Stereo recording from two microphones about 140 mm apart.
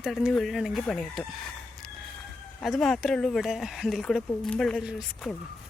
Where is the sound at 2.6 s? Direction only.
Centre (ahead or behind).